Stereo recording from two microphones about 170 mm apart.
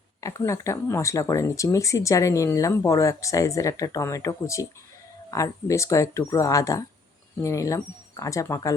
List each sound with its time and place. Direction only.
0.2 s speech: 20° left (ahead or behind)